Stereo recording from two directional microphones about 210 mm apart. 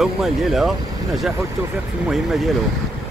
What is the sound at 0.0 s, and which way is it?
Speech, centre (ahead or behind).